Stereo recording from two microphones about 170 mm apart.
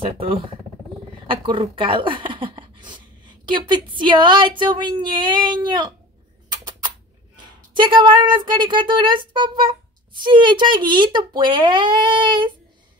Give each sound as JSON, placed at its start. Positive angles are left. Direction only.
{"t": 0.0, "sound": "a woman's voice", "side_deg": -35}
{"t": 7.7, "sound": "a woman's voice", "side_deg": -25}